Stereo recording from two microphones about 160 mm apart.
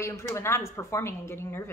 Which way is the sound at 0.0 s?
15° left (ahead or behind).